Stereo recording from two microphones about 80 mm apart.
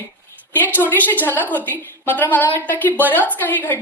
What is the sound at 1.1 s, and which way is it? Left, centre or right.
A woman's voice, left.